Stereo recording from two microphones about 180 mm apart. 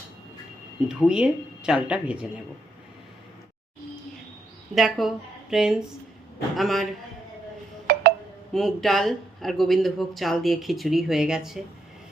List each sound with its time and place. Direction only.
0.9 s speech: 5° right (ahead or behind)
4.7 s speech: centre (ahead or behind)
7.9 s music: 60° right (ahead or behind)
8.5 s speech: centre (ahead or behind)